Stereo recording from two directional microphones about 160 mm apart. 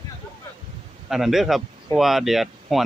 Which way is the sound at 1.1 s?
Centre (ahead or behind).